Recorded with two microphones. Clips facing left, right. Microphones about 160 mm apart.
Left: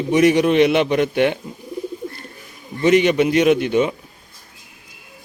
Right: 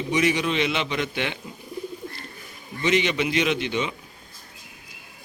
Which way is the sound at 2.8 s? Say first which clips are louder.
Left 8 dB; 50° left (ahead or behind).